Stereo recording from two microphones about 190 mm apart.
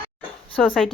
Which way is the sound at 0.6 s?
Centre (ahead or behind).